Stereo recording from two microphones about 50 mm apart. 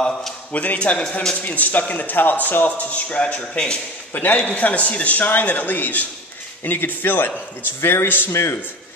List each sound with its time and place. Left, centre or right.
0.5 s a man's voice: left
4.1 s speech: left
7.8 s a man's voice: left